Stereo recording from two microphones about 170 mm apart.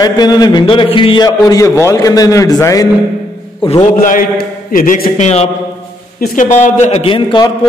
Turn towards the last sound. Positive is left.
turn(degrees=30)  # may be behind; listen again after turning